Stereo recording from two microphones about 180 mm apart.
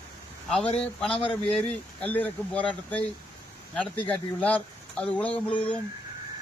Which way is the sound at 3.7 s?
10° left (ahead or behind).